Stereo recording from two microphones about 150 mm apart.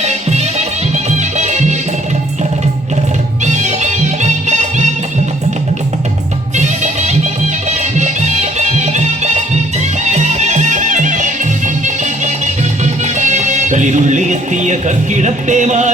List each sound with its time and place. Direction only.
0.0 s music: 45° right (ahead or behind)
3.4 s music: 50° right (ahead or behind)
6.6 s music: 50° right (ahead or behind)
12.8 s speech: 50° right (ahead or behind)